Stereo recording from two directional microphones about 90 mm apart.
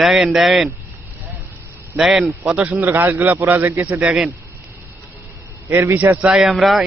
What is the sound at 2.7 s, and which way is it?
A man's voice, 25° right (ahead or behind).